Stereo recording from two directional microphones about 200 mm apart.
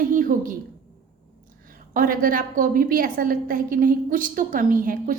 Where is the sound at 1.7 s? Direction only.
45° right (ahead or behind).